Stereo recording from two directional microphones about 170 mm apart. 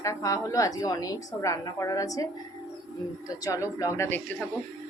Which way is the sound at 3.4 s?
20° left (ahead or behind).